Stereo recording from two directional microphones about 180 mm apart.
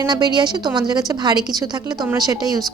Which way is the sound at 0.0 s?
25° right (ahead or behind).